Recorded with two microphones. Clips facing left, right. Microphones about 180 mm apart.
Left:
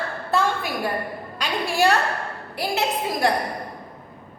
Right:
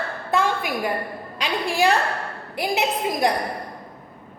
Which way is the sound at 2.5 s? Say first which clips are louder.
Right 1 dB; 15° right (ahead or behind).